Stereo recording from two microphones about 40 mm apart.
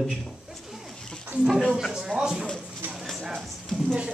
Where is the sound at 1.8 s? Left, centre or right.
Centre.